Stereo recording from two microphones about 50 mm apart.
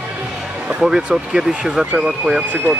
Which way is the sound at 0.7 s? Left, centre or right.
Centre.